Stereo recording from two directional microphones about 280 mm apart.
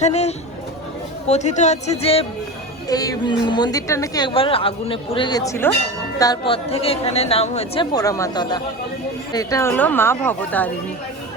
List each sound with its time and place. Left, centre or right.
0.0 s a woman's voice: left; by 10.7 s centre